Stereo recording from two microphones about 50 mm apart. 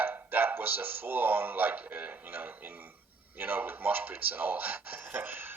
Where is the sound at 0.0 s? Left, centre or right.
Right.